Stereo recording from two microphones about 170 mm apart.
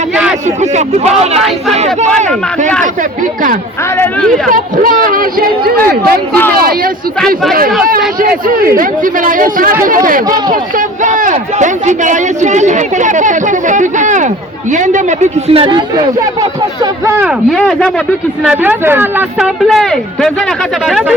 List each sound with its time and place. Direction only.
0.4 s speech: 45° right (ahead or behind)
1.4 s speech: centre (ahead or behind)
1.7 s speech: 40° right (ahead or behind)
3.9 s speech: 10° left (ahead or behind)
4.5 s a man's voice: 55° right (ahead or behind)
8.6 s a man's voice: 55° right (ahead or behind); by 17.3 s 15° right (ahead or behind)
17.5 s speech: 5° left (ahead or behind)
18.4 s speech: 5° right (ahead or behind)
19.6 s speech: centre (ahead or behind)